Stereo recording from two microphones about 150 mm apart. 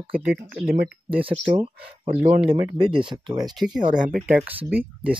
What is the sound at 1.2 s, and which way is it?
Speech, 35° right (ahead or behind).